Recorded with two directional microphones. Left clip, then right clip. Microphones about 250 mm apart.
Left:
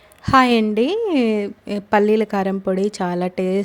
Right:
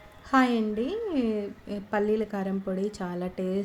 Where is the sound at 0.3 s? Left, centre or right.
Left.